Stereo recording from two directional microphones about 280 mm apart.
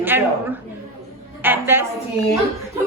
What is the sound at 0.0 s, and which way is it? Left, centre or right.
Speech, centre.